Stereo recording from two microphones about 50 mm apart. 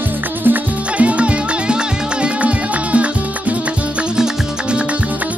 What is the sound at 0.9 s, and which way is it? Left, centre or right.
Music, right.